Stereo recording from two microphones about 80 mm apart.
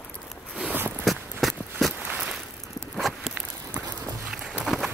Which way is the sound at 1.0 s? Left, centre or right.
Centre.